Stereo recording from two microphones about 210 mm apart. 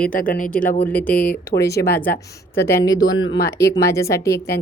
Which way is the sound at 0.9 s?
5° left (ahead or behind).